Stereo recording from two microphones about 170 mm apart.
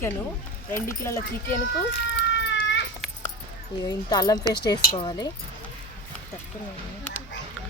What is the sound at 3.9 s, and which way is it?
Speech, 25° left (ahead or behind).